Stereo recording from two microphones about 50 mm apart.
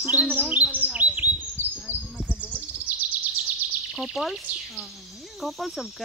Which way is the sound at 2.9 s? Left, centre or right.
Right.